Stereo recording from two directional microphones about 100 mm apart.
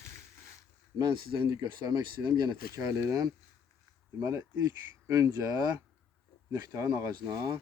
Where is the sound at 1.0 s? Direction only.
45° right (ahead or behind).